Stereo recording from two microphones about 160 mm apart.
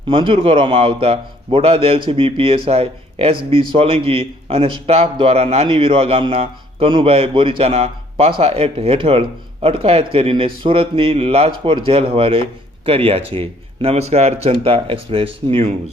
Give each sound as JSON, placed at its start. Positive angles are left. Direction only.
{"t": 0.1, "sound": "speech", "side_deg": -35}